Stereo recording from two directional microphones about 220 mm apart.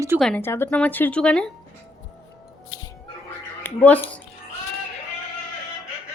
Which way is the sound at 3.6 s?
10° left (ahead or behind).